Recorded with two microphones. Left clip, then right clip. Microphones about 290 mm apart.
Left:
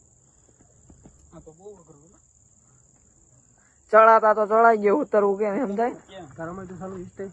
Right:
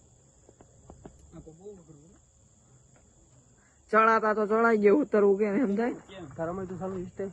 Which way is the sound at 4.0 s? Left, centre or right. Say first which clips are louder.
Left 8 dB; centre.